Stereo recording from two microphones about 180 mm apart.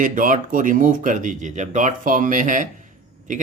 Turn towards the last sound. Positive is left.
turn(degrees=-45)  # may be behind; listen again after turning